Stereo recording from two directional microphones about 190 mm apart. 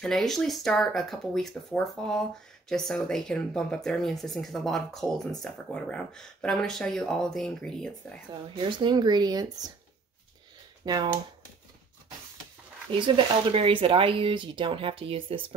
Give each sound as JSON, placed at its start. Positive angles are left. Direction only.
{"t": 0.0, "sound": "speech", "side_deg": 0}
{"t": 8.5, "sound": "speech", "side_deg": -25}
{"t": 10.8, "sound": "speech", "side_deg": -20}
{"t": 12.9, "sound": "speech", "side_deg": -25}